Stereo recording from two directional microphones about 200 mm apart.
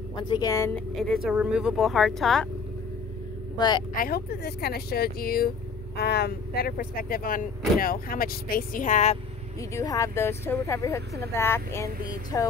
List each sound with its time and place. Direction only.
0.1 s speech: 20° left (ahead or behind)
0.9 s speech: centre (ahead or behind)
3.5 s speech: 20° left (ahead or behind)
3.9 s speech: 50° left (ahead or behind)
9.6 s speech: 15° left (ahead or behind)